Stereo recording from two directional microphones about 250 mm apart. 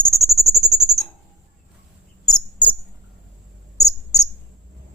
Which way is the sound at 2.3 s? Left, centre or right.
Centre.